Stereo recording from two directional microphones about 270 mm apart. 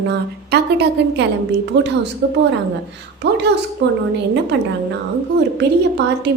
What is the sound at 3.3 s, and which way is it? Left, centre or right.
Speech, right.